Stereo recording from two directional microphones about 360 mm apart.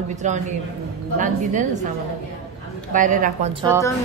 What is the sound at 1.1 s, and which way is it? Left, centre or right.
Speech, right.